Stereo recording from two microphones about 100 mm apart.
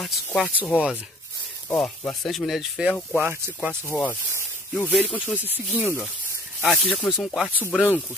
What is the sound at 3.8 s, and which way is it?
Speech, 20° left (ahead or behind).